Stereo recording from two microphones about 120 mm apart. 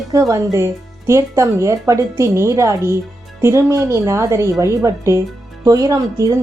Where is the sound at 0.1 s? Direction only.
25° right (ahead or behind).